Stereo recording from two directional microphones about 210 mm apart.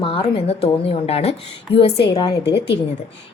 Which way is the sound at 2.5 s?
50° left (ahead or behind).